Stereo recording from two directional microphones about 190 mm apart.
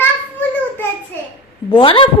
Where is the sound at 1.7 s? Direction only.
25° left (ahead or behind).